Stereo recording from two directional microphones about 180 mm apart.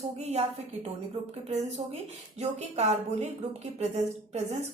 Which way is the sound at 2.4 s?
40° right (ahead or behind).